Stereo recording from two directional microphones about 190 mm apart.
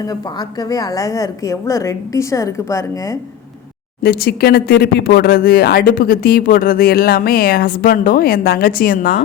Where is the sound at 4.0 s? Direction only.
55° left (ahead or behind).